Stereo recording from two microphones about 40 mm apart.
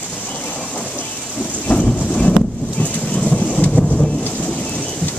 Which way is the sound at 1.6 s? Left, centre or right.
Left.